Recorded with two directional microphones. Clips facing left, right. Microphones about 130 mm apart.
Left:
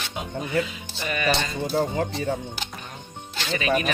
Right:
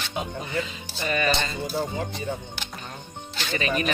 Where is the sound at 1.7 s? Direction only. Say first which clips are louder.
Left 6 dB; 90° left.